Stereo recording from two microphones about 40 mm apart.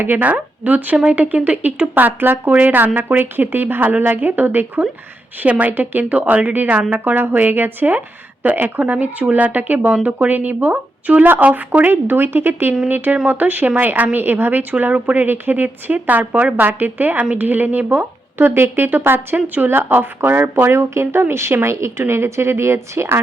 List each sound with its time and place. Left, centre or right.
0.2 s a woman's voice: right
5.5 s speech: right
5.7 s a woman's voice: right
8.8 s a woman's voice: right
11.9 s a woman's voice: right
13.2 s a woman's voice: right
14.2 s a woman's voice: right
15.2 s a woman's voice: right
19.9 s speech: right